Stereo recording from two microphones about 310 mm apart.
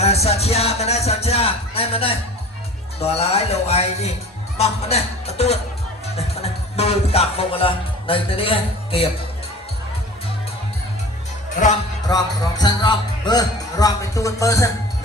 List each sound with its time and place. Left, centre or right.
0.0 s music: centre
12.0 s music: centre